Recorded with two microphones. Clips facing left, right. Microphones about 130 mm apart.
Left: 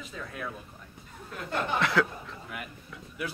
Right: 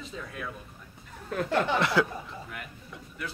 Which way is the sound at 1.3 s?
80° right.